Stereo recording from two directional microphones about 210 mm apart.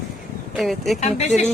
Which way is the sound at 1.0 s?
35° left (ahead or behind).